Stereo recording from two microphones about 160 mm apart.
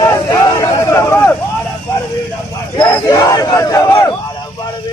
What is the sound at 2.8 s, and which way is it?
Crowd, 30° left (ahead or behind).